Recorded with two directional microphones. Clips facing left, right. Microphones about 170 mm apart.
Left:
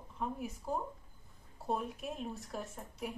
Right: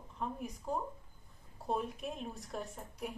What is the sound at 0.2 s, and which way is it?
A woman's voice, 5° left (ahead or behind).